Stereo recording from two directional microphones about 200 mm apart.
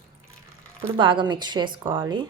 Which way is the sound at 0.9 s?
25° right (ahead or behind).